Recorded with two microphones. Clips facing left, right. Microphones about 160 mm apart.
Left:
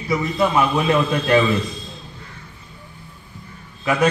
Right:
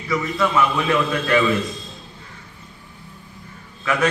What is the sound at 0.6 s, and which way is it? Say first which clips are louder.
Speech: left 1 dB; 20° left (ahead or behind).